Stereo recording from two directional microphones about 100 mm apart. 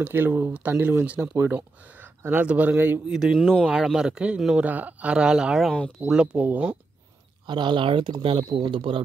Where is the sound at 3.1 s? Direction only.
5° right (ahead or behind).